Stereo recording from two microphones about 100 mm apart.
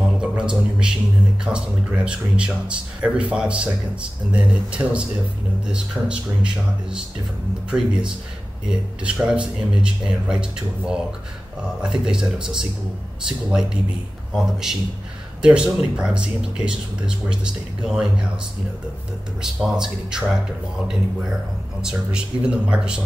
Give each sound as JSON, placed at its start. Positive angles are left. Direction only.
{"t": 0.2, "sound": "music", "side_deg": -10}
{"t": 1.4, "sound": "a man's voice", "side_deg": -10}
{"t": 19.4, "sound": "a man's voice", "side_deg": -5}